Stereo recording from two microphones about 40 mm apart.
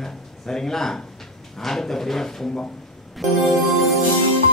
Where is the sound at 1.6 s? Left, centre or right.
Centre.